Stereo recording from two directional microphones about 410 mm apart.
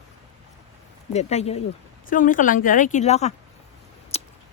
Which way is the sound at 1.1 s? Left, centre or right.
Centre.